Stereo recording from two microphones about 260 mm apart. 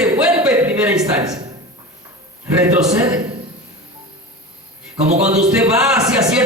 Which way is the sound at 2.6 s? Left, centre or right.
Centre.